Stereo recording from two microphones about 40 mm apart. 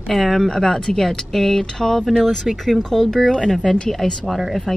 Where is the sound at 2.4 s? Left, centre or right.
Centre.